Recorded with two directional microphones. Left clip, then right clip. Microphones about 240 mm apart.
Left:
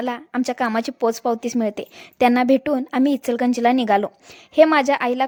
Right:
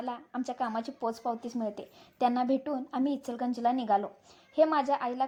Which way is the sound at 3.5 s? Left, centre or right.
Left.